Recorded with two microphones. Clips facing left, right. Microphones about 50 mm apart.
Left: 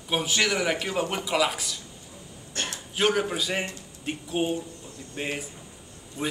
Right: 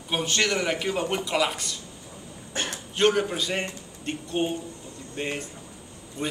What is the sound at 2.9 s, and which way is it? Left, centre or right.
A man's voice, centre.